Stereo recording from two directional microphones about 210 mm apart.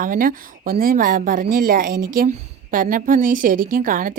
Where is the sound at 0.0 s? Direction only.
40° right (ahead or behind).